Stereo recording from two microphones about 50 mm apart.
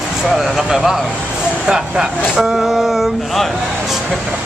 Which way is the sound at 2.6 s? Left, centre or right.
Centre.